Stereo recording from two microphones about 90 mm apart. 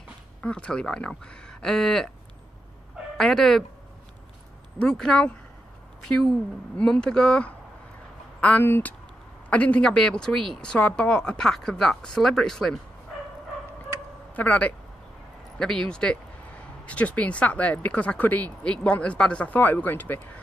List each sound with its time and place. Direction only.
0.4 s speech: 10° left (ahead or behind)
3.2 s speech: 5° left (ahead or behind)
4.7 s speech: 10° left (ahead or behind)
6.8 s speech: 10° left (ahead or behind)
14.3 s speech: 15° left (ahead or behind)